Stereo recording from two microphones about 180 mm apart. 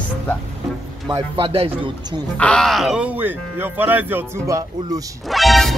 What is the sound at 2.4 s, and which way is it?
Speech, 5° left (ahead or behind).